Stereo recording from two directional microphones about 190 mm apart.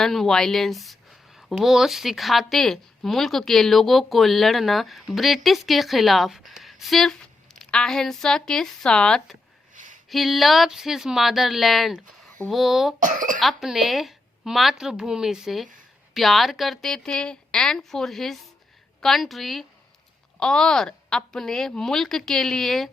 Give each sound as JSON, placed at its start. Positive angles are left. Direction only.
{"t": 0.0, "sound": "speech", "side_deg": 0}
{"t": 9.7, "sound": "a sound", "side_deg": -40}
{"t": 10.1, "sound": "speech", "side_deg": 0}
{"t": 13.0, "sound": "speech", "side_deg": -45}
{"t": 13.4, "sound": "speech", "side_deg": 0}